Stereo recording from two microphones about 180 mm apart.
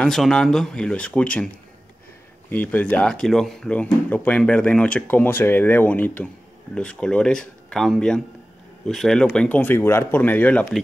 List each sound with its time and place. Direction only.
0.0 s speech: 5° left (ahead or behind)
2.5 s speech: 10° left (ahead or behind)